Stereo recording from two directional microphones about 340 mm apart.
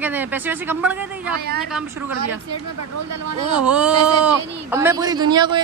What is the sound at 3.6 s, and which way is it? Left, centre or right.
Speech, centre.